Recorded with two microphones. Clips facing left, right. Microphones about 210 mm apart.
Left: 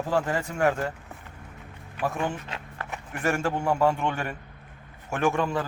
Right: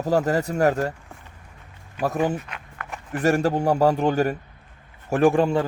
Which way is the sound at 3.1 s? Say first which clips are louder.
Right 6 dB; 35° right (ahead or behind).